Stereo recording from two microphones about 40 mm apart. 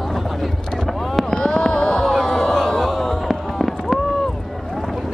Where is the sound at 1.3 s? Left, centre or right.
Centre.